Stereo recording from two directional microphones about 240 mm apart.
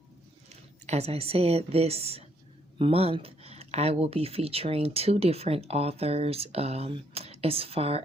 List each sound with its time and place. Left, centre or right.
0.9 s speech: right